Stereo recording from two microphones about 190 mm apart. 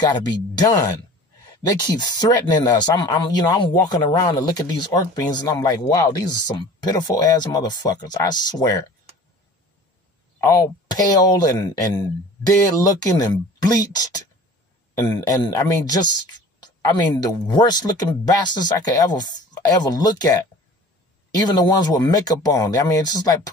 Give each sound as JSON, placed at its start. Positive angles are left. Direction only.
{"t": 0.0, "sound": "speech", "side_deg": 20}
{"t": 10.4, "sound": "speech", "side_deg": 20}